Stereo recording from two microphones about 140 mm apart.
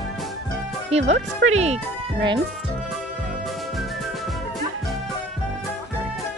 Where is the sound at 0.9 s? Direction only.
50° right (ahead or behind).